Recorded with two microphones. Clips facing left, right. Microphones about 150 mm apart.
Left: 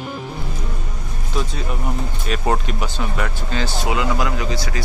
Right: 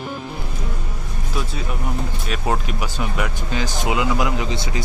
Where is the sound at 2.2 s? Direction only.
Centre (ahead or behind).